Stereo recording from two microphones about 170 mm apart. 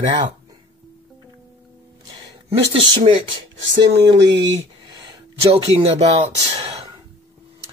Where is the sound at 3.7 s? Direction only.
85° right.